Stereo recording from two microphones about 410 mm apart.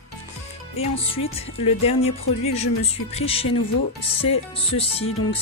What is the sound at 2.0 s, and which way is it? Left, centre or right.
Music, left.